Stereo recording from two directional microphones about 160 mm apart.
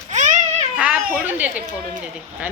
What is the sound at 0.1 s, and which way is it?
Child singing, 50° right (ahead or behind).